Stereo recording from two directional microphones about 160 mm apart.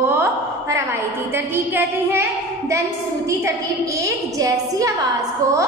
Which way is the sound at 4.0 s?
20° right (ahead or behind).